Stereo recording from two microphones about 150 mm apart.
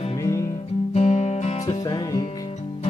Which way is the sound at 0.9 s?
50° left (ahead or behind).